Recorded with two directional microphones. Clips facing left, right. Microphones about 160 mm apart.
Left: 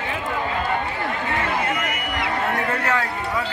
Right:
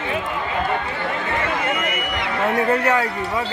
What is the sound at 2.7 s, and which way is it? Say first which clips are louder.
Speech: right 5 dB; 20° right (ahead or behind).